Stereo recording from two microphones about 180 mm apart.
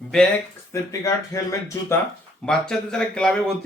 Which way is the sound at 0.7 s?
15° left (ahead or behind).